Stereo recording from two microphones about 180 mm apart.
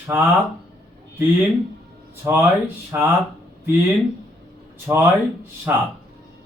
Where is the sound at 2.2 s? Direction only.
10° right (ahead or behind).